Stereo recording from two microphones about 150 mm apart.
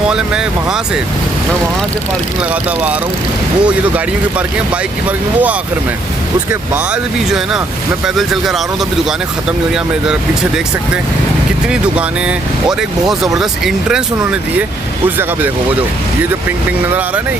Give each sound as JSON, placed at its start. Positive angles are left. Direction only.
{"t": 0.1, "sound": "speech", "side_deg": -5}
{"t": 3.6, "sound": "speech", "side_deg": -10}
{"t": 6.5, "sound": "speech", "side_deg": -10}
{"t": 13.1, "sound": "speech", "side_deg": 0}